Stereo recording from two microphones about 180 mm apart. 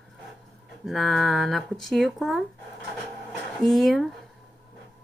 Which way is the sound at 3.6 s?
Centre (ahead or behind).